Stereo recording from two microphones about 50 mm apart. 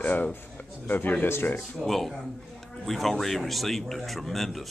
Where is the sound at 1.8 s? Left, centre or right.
Centre.